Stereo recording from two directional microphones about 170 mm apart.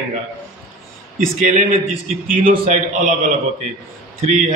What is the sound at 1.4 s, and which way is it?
Speech, 50° right (ahead or behind).